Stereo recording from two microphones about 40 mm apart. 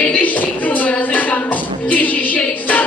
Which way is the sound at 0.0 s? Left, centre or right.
Left.